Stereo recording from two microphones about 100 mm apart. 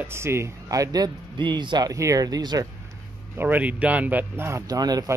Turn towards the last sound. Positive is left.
turn(degrees=-40)  # may be behind; listen again after turning